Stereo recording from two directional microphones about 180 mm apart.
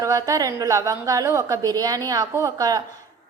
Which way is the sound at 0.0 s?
20° right (ahead or behind).